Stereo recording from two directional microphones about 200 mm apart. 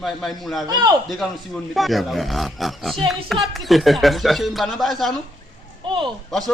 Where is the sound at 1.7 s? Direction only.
Centre (ahead or behind).